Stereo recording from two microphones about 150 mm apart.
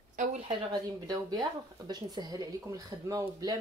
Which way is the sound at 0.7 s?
25° right (ahead or behind).